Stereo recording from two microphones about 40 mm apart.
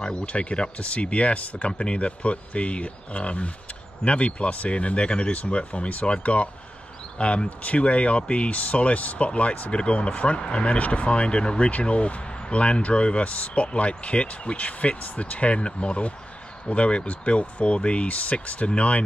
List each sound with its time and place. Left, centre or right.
0.0 s speech: left